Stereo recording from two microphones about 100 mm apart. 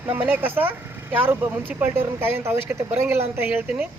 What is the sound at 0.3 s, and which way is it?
Speech, 20° right (ahead or behind).